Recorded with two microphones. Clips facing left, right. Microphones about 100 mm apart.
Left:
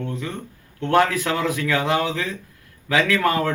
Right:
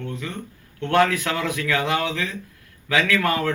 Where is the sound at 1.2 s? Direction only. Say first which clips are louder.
Left 2 dB; 5° left (ahead or behind).